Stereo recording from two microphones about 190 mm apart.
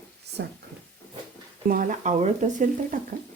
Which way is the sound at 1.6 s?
45° right (ahead or behind).